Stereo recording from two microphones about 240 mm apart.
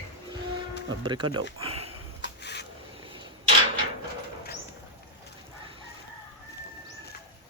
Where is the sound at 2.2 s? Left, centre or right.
Left.